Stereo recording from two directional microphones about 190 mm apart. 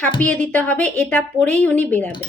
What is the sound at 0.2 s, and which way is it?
A woman's voice, 5° left (ahead or behind).